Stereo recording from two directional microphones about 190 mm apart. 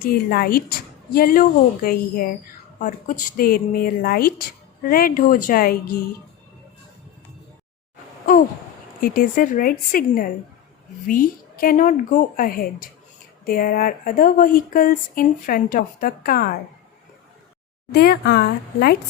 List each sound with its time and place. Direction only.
0.0 s a woman's voice: 55° left (ahead or behind)
9.0 s a woman's voice: 50° left (ahead or behind)
17.9 s speech: 55° left (ahead or behind)